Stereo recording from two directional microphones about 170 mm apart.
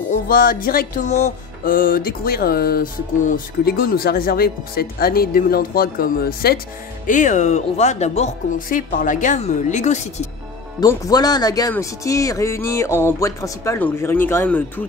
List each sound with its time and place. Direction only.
0.1 s speech: 55° left (ahead or behind)
1.0 s speech: 40° left (ahead or behind)
1.6 s speech: 55° left (ahead or behind)
7.1 s speech: 45° left (ahead or behind)
8.5 s speech: 55° left (ahead or behind)
10.8 s speech: 20° left (ahead or behind)